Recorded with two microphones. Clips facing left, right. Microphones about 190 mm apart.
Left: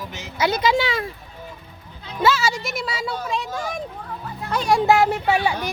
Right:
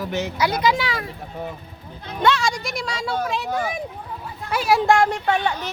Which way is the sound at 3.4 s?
60° right (ahead or behind).